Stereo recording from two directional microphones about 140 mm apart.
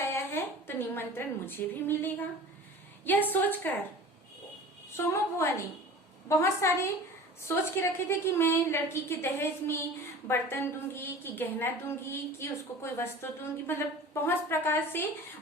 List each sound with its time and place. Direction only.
0.1 s a woman's voice: 15° left (ahead or behind)
4.9 s a woman's voice: 20° left (ahead or behind)